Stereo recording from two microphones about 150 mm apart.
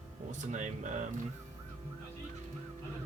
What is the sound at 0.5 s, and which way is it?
Speech, 55° right (ahead or behind).